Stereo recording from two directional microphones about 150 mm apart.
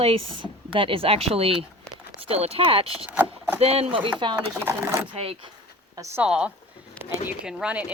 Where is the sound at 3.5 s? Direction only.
40° right (ahead or behind).